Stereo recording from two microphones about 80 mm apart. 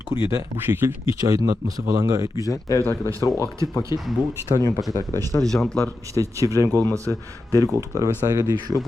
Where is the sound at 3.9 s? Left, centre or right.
Left.